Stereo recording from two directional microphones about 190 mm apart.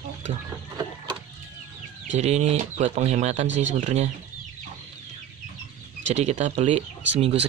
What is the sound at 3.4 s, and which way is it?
Speech, 75° right (ahead or behind).